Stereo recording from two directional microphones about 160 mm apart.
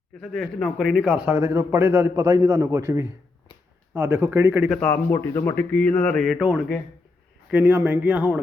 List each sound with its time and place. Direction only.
0.2 s a man's voice: centre (ahead or behind)
4.8 s a man's voice: 15° left (ahead or behind); by 8.4 s 10° right (ahead or behind)